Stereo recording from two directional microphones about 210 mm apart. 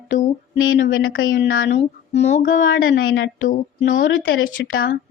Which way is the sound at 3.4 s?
40° left (ahead or behind).